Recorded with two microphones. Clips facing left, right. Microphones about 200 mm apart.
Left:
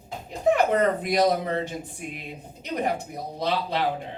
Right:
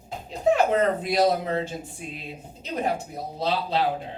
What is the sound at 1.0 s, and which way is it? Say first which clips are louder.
A man's voice: even; 15° left (ahead or behind).